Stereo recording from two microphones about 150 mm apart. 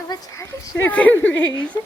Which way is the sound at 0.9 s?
10° left (ahead or behind).